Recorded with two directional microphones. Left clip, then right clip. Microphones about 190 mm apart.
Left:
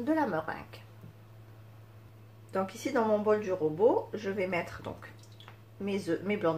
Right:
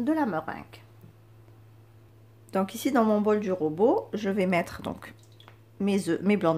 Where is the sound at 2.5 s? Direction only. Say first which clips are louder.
Right 5 dB; 50° right (ahead or behind).